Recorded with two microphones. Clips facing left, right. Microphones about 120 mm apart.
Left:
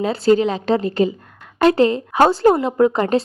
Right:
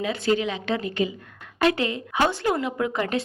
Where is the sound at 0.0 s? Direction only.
35° left (ahead or behind).